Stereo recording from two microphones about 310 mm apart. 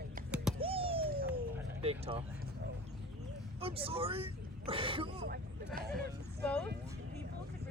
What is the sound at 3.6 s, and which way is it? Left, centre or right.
Speech, centre.